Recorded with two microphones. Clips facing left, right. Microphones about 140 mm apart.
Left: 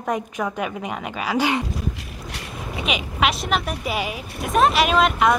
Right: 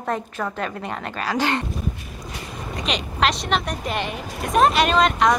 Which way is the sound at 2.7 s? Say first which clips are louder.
Left 1 dB; 5° left (ahead or behind).